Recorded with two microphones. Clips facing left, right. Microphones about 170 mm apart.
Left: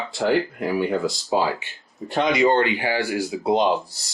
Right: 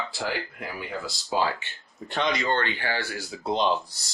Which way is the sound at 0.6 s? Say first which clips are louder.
Left 13 dB; 80° left.